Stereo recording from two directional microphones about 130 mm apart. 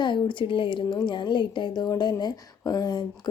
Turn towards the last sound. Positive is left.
turn(degrees=30)  # may be behind; listen again after turning